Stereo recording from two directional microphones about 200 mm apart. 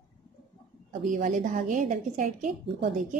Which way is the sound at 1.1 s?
40° right (ahead or behind).